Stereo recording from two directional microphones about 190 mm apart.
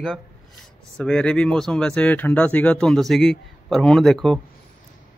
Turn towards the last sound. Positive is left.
turn(degrees=0)  # may be behind; listen again after turning